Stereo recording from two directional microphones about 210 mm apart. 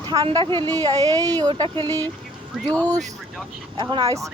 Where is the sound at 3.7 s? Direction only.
20° right (ahead or behind).